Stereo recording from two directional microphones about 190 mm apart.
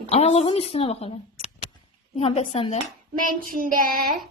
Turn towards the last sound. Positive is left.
turn(degrees=-50)  # may be behind; listen again after turning